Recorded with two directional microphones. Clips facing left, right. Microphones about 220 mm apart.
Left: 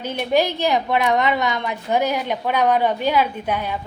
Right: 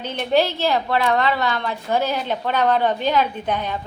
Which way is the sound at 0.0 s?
10° left (ahead or behind).